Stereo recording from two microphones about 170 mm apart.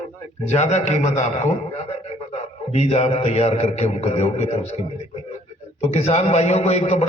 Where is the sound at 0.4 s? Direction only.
40° left (ahead or behind).